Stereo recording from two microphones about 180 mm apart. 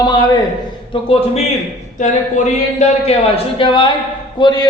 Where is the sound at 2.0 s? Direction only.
40° left (ahead or behind).